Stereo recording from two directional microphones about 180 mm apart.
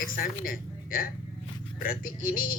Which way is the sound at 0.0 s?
50° left (ahead or behind).